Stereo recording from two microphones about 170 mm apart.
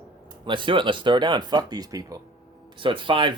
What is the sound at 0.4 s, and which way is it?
Speech, 30° right (ahead or behind).